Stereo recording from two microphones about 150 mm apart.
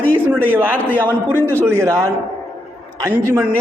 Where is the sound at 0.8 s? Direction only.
10° left (ahead or behind).